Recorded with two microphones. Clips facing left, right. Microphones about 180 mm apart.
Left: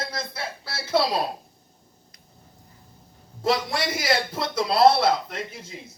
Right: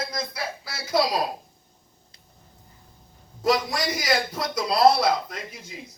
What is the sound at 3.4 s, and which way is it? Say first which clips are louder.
A man's voice: right 1 dB; 30° left (ahead or behind).